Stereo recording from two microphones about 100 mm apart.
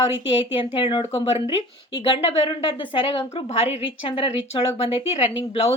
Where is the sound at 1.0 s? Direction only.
80° left.